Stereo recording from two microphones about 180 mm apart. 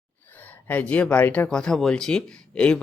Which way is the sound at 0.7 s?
10° left (ahead or behind).